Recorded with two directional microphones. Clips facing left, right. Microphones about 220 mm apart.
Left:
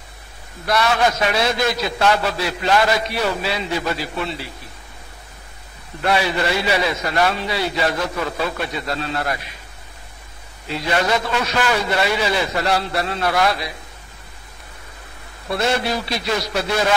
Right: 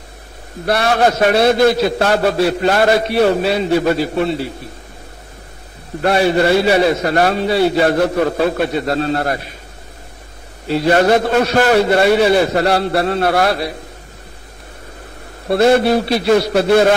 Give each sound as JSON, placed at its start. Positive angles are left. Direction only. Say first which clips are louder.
{"t": 0.7, "sound": "a man's voice", "louder": "right 4 dB", "side_deg": -55}
{"t": 4.1, "sound": "a man's voice", "louder": "right 9 dB", "side_deg": -40}
{"t": 5.9, "sound": "a man's voice", "louder": "right 7 dB", "side_deg": -50}
{"t": 10.8, "sound": "a man's voice", "louder": "right 8 dB", "side_deg": -50}
{"t": 15.7, "sound": "a man's voice", "louder": "right 10 dB", "side_deg": -55}